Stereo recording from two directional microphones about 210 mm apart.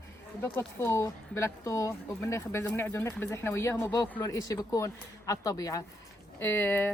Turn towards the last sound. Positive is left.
turn(degrees=10)  # may be behind; listen again after turning